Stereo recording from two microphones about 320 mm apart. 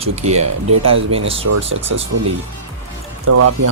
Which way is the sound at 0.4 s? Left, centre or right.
Right.